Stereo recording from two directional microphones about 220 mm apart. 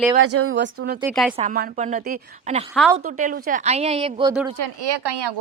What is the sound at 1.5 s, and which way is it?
Speech, 40° right (ahead or behind).